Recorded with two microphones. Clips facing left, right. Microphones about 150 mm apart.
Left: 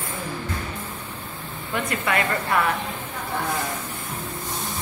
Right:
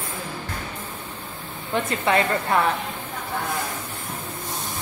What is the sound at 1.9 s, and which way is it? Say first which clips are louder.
Speech: right 3 dB; 25° right (ahead or behind).